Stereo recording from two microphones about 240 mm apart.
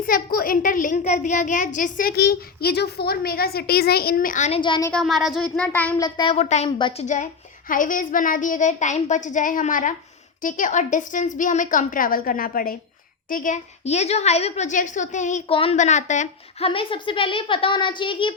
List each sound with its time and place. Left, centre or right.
0.0 s a child's voice: left; by 4.9 s centre
4.9 s speech: centre
6.1 s a woman's voice: centre
7.7 s a child's voice: left